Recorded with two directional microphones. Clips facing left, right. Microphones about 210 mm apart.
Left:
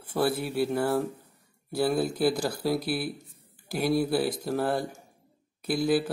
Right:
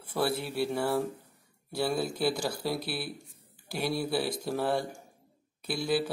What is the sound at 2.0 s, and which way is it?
Speech, 50° left (ahead or behind).